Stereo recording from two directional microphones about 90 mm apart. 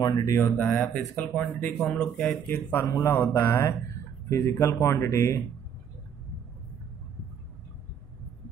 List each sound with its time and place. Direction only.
0.0 s speech: 45° left (ahead or behind)
0.4 s speech: 20° left (ahead or behind)
2.7 s speech: 30° left (ahead or behind)